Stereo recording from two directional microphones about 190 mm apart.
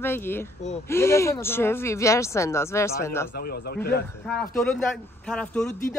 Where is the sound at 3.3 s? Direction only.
55° left (ahead or behind).